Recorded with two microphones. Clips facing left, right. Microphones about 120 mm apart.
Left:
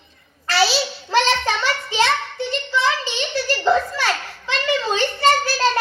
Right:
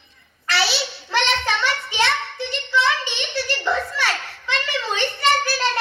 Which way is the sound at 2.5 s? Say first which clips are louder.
Even; 25° left (ahead or behind).